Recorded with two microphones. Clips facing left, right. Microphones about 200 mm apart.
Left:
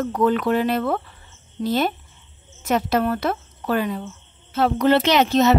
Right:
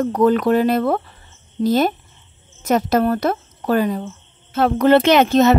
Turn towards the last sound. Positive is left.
turn(degrees=-50)  # may be behind; listen again after turning